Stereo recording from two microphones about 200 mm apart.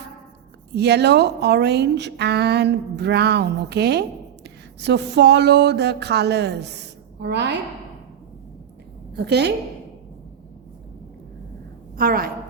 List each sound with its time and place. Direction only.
0.8 s a woman's voice: 55° right (ahead or behind)
9.1 s a woman's voice: 55° right (ahead or behind)
11.9 s a woman's voice: 45° right (ahead or behind)